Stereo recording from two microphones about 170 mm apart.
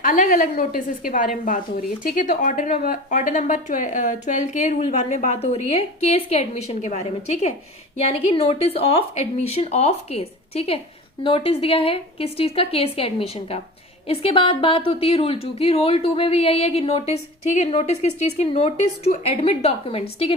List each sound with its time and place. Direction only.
0.0 s a woman's voice: 50° left (ahead or behind); by 20.3 s 35° left (ahead or behind)